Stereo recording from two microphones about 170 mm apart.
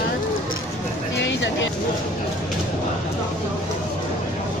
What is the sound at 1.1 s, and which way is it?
Vehicle, 90° left.